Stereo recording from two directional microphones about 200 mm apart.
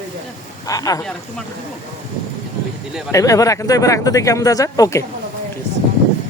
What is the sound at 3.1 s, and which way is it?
Speech, 15° left (ahead or behind).